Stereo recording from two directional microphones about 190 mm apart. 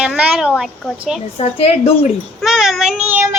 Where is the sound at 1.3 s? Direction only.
35° left (ahead or behind).